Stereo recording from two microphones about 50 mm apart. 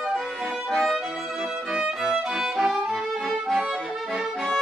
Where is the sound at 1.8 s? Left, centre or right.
Centre.